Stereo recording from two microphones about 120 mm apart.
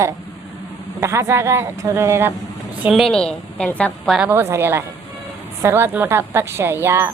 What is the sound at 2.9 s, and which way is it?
A woman's voice, 5° left (ahead or behind).